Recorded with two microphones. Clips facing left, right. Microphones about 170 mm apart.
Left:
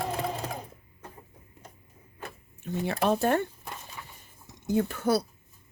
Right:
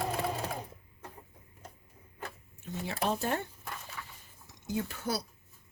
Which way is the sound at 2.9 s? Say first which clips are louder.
Left 7 dB; 60° left (ahead or behind).